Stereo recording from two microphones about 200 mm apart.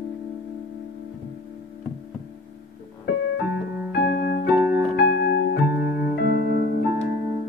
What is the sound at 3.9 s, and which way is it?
Music, 50° left (ahead or behind).